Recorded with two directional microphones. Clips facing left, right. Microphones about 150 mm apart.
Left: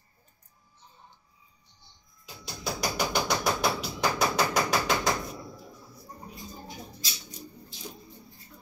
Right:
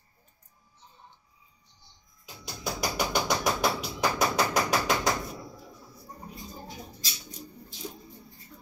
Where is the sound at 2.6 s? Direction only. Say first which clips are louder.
Even; centre (ahead or behind).